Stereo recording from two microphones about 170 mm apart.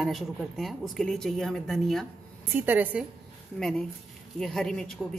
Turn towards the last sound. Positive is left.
turn(degrees=0)  # may be behind; listen again after turning